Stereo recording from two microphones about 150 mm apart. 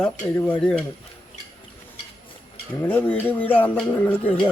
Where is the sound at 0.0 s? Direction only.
10° left (ahead or behind).